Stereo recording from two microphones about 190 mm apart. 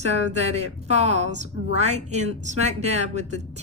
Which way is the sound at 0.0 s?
35° right (ahead or behind).